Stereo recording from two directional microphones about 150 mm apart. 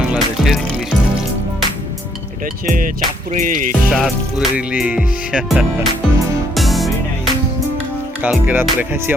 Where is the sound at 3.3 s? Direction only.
60° right (ahead or behind).